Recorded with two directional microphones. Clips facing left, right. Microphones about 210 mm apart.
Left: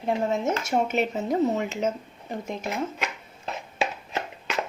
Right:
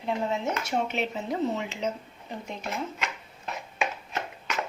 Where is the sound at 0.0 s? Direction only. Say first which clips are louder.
Left 4 dB; 45° left (ahead or behind).